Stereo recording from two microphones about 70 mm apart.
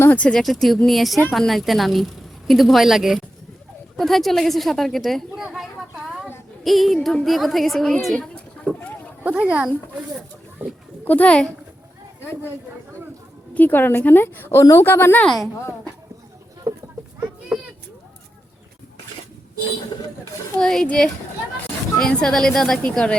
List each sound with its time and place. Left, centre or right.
0.1 s speech: centre
0.3 s a woman's voice: centre
6.7 s a woman's voice: centre
8.7 s speech: centre
9.2 s speech: centre
11.0 s a child's voice: left
13.5 s a woman's voice: left
16.7 s a sound: right
17.5 s a sound: centre
20.6 s a woman's voice: centre